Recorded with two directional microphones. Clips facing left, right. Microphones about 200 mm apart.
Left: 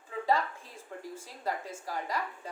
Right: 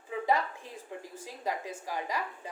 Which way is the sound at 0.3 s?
15° right (ahead or behind).